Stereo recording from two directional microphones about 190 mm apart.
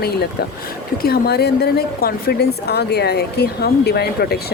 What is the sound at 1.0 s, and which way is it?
A woman's voice, 55° left (ahead or behind).